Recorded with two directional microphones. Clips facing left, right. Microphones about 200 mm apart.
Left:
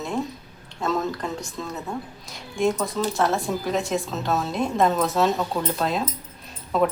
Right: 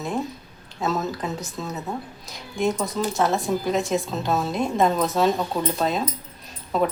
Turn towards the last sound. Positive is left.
turn(degrees=0)  # may be behind; listen again after turning